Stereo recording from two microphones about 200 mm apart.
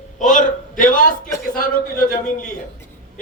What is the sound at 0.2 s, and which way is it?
A man's voice, 40° left (ahead or behind).